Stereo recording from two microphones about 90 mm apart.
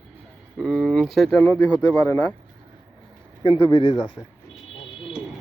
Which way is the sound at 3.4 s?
65° left (ahead or behind).